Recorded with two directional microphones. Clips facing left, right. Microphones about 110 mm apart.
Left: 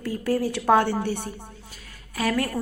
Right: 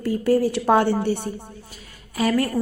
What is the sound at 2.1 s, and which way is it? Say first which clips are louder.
Speech: right 4 dB; 5° right (ahead or behind).